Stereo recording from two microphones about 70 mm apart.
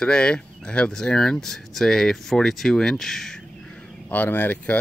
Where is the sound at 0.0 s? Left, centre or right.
Centre.